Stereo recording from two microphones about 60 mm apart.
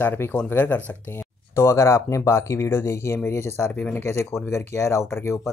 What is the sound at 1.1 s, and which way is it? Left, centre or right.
Speech, left.